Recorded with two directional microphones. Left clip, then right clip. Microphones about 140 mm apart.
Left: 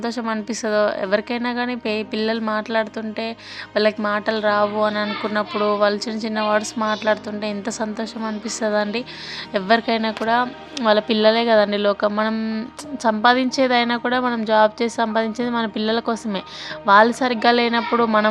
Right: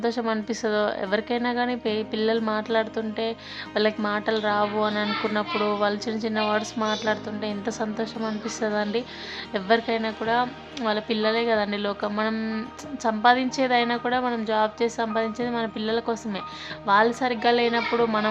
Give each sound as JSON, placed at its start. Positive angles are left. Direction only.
{"t": 0.0, "sound": "a woman's voice", "side_deg": 15}
{"t": 9.8, "sound": "a woman's voice", "side_deg": 40}
{"t": 13.0, "sound": "a woman's voice", "side_deg": 40}